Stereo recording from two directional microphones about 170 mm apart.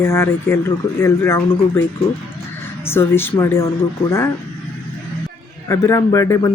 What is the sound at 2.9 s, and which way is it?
Speech, 15° left (ahead or behind).